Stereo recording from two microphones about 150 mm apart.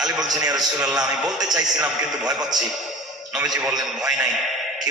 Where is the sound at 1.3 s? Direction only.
25° right (ahead or behind).